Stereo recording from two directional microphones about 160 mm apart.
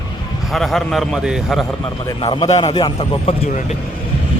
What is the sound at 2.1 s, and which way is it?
A man's voice, 30° left (ahead or behind).